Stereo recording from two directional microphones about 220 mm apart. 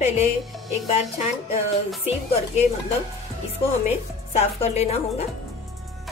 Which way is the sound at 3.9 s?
30° left (ahead or behind).